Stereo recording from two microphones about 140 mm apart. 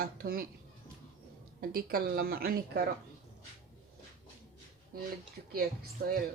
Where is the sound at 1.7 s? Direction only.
90° right.